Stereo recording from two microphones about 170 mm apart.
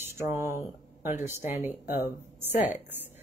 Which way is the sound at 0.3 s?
15° right (ahead or behind).